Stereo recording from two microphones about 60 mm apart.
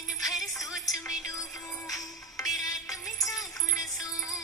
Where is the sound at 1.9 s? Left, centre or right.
Left.